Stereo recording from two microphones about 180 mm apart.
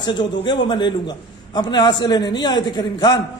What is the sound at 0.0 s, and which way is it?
A man's voice, 25° left (ahead or behind).